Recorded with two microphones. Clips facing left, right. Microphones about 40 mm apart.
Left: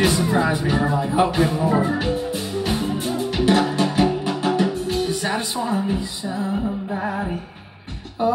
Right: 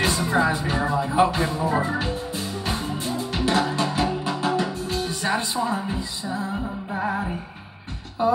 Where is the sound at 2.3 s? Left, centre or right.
Left.